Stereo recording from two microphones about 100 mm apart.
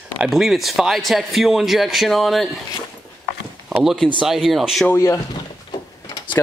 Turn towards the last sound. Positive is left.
turn(degrees=50)  # may be behind; listen again after turning